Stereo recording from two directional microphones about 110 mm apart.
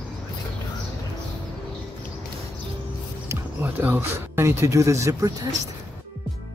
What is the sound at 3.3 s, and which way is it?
Music, 20° right (ahead or behind).